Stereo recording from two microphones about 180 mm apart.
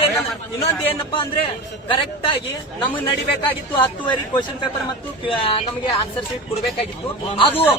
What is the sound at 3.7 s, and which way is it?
Speech, 25° left (ahead or behind).